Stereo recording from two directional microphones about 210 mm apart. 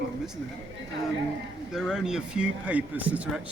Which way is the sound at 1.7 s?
Centre (ahead or behind).